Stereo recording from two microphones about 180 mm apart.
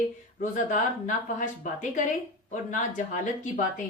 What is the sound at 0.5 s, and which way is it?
A woman's voice, 45° left (ahead or behind).